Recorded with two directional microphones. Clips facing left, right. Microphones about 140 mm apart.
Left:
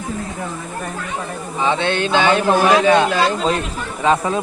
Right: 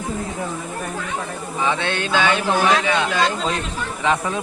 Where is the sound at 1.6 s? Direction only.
30° left (ahead or behind).